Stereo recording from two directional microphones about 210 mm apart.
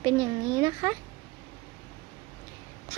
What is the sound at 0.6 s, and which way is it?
Speech, 15° right (ahead or behind).